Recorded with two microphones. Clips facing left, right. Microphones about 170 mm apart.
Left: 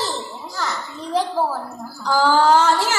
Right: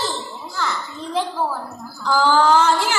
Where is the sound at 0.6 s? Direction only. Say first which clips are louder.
Right 1 dB; 40° left (ahead or behind).